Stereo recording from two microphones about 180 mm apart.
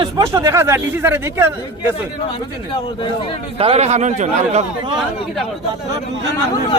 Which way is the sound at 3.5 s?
35° right (ahead or behind).